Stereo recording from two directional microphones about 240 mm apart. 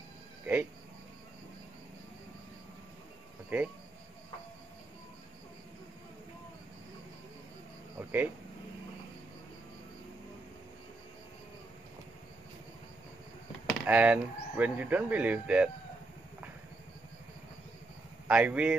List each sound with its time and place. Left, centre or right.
3.4 s speech: centre
8.0 s a sound: centre
13.7 s speech: centre
18.2 s speech: centre